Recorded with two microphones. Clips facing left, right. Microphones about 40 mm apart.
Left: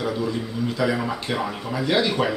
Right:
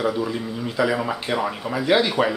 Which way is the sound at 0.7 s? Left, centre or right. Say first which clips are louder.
Right 3 dB; centre.